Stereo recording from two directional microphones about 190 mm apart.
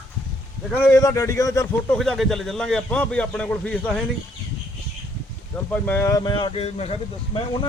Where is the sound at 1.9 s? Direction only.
Centre (ahead or behind).